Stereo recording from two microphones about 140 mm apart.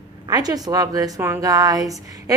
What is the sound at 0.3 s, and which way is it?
A woman's voice, 25° right (ahead or behind).